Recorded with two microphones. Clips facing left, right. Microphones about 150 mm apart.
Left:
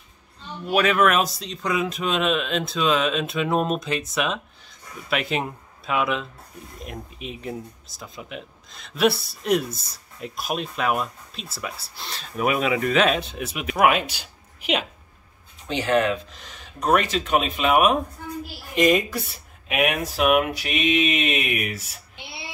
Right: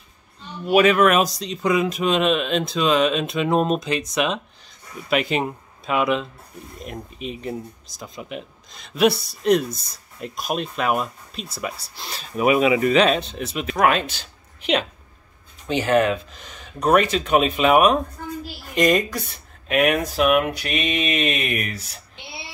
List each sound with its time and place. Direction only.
0.7 s speech: centre (ahead or behind)
15.8 s speech: 45° right (ahead or behind)
16.3 s speech: centre (ahead or behind)